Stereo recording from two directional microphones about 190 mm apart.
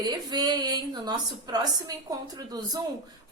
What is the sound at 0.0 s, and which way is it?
A woman's voice, 20° right (ahead or behind).